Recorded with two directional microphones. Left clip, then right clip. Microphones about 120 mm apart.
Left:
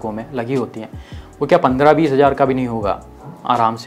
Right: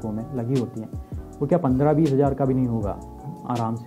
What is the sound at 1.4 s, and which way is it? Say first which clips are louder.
Speech: left 9 dB; 20° left (ahead or behind).